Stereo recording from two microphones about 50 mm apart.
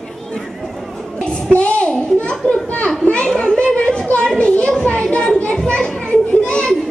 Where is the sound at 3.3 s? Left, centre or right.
Centre.